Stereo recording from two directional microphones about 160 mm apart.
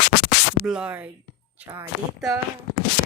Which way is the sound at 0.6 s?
5° right (ahead or behind).